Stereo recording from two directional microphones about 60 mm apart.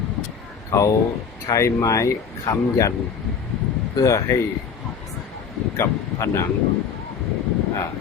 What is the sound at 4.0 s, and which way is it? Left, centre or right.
Speech, left.